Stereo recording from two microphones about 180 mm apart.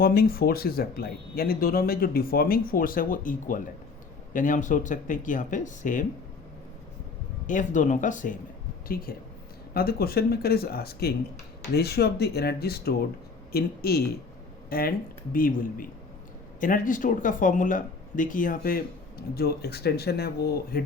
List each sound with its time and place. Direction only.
0.0 s speech: 55° left (ahead or behind)
7.4 s speech: 45° left (ahead or behind)